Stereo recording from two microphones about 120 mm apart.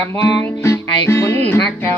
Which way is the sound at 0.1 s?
20° left (ahead or behind).